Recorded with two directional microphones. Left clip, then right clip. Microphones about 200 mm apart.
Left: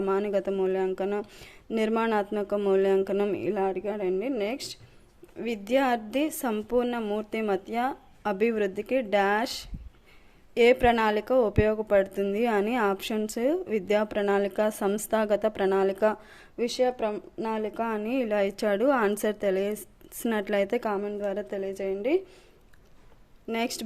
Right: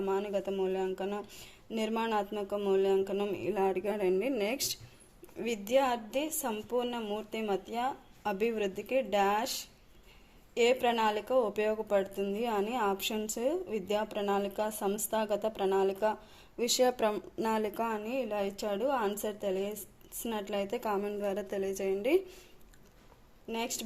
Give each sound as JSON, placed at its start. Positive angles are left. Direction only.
{"t": 0.0, "sound": "speech", "side_deg": 30}
{"t": 5.4, "sound": "speech", "side_deg": 25}
{"t": 16.6, "sound": "speech", "side_deg": 10}
{"t": 17.8, "sound": "speech", "side_deg": 25}
{"t": 23.5, "sound": "speech", "side_deg": 30}